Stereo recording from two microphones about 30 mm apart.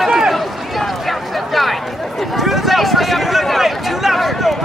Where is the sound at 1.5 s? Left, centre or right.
Centre.